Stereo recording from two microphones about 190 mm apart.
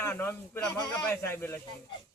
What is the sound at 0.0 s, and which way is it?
Speech, 10° left (ahead or behind).